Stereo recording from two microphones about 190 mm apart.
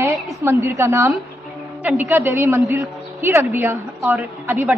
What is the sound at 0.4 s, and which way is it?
A woman's voice, 15° right (ahead or behind).